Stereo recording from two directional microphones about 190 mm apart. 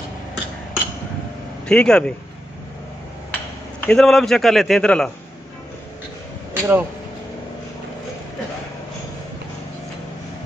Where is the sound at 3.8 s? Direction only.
Centre (ahead or behind).